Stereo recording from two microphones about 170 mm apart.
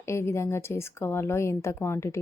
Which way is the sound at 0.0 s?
15° left (ahead or behind).